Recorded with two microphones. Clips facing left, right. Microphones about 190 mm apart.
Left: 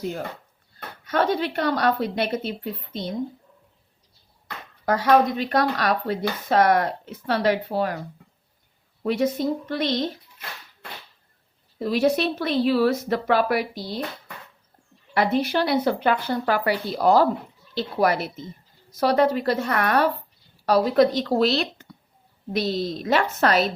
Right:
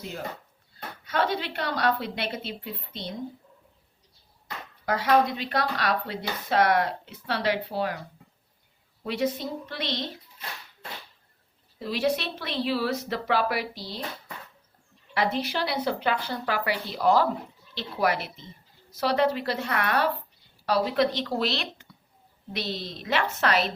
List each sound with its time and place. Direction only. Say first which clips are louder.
1.0 s speech: left 5 dB; 45° left (ahead or behind)
4.9 s speech: left 4 dB; 45° left (ahead or behind)
9.0 s speech: left 6 dB; 45° left (ahead or behind)
11.8 s speech: left 6 dB; 45° left (ahead or behind)
15.1 s speech: left 6 dB; 50° left (ahead or behind)